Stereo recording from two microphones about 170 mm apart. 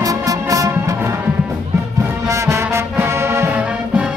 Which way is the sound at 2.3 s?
15° right (ahead or behind).